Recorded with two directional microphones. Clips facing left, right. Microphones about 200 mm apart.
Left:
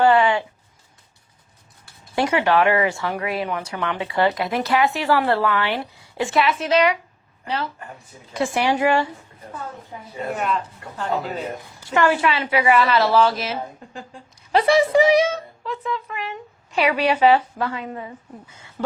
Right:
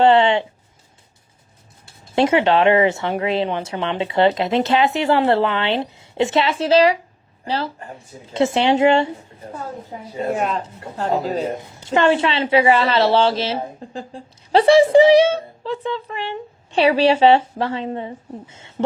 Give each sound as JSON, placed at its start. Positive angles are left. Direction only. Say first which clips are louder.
{"t": 0.0, "sound": "a woman's voice", "louder": "right 3 dB", "side_deg": -25}
{"t": 2.1, "sound": "a woman's voice", "louder": "right 3 dB", "side_deg": -25}
{"t": 10.6, "sound": "a woman's voice", "louder": "right 4 dB", "side_deg": -25}
{"t": 10.9, "sound": "speech", "louder": "right 5 dB", "side_deg": -40}
{"t": 11.5, "sound": "a woman's voice", "louder": "right 3 dB", "side_deg": -25}